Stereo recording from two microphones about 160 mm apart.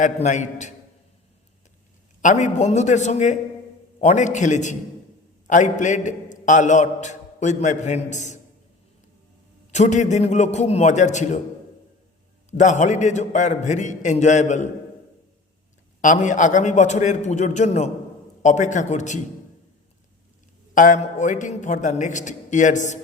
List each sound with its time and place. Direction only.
0.0 s a man's voice: 50° left (ahead or behind)
2.2 s a man's voice: 50° left (ahead or behind)
9.7 s a man's voice: 50° left (ahead or behind)
12.5 s a man's voice: 50° left (ahead or behind)
16.0 s a man's voice: 50° left (ahead or behind)
20.7 s a man's voice: 50° left (ahead or behind)